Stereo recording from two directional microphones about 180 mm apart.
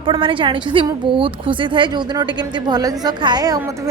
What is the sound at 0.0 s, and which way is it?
A woman's voice, 30° right (ahead or behind).